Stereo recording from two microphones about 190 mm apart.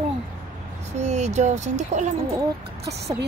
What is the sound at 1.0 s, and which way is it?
A woman's voice, 35° right (ahead or behind).